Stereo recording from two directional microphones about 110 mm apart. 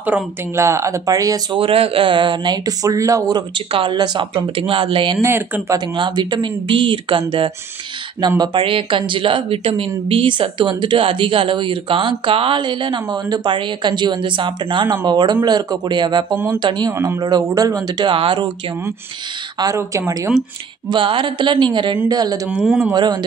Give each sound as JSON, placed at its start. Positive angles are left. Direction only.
{"t": 0.0, "sound": "speech", "side_deg": -20}
{"t": 1.6, "sound": "speech", "side_deg": -55}
{"t": 4.6, "sound": "speech", "side_deg": -55}
{"t": 5.2, "sound": "speech", "side_deg": -25}
{"t": 5.9, "sound": "speech", "side_deg": -45}
{"t": 16.9, "sound": "speech", "side_deg": -25}
{"t": 17.2, "sound": "speech", "side_deg": -35}
{"t": 19.6, "sound": "speech", "side_deg": -30}
{"t": 20.9, "sound": "speech", "side_deg": -50}
{"t": 22.6, "sound": "speech", "side_deg": -5}
{"t": 22.9, "sound": "speech", "side_deg": -40}